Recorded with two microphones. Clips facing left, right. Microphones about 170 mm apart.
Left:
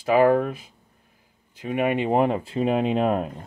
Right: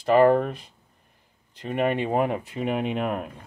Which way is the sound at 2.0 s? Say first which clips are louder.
Left 3 dB; 25° left (ahead or behind).